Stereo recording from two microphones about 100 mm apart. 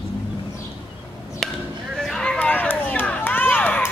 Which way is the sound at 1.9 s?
5° left (ahead or behind).